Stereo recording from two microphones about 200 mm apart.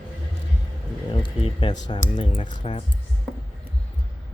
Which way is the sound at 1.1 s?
25° left (ahead or behind).